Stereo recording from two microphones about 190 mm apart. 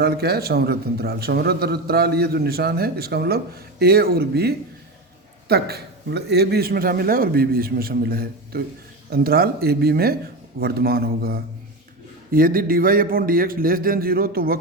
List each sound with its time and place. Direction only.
0.0 s a man's voice: 55° right (ahead or behind)